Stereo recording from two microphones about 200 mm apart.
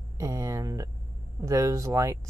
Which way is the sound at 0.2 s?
15° right (ahead or behind).